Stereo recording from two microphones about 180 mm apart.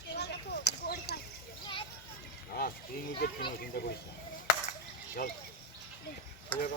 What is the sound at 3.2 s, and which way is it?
Speech, 60° left (ahead or behind).